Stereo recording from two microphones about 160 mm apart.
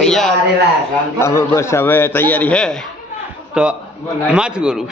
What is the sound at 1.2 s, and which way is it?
A man's voice, 15° left (ahead or behind).